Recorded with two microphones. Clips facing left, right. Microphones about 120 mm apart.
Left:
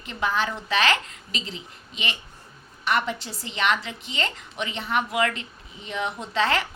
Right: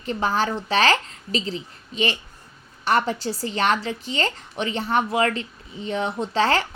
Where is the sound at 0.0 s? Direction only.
35° right (ahead or behind).